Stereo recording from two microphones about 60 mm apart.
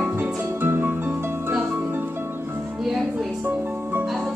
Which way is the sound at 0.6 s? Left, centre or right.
Right.